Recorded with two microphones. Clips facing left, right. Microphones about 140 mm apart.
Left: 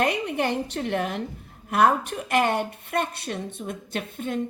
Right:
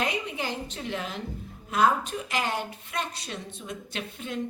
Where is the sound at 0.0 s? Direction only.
60° left (ahead or behind).